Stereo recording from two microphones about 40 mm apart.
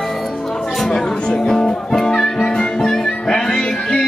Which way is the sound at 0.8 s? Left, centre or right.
Centre.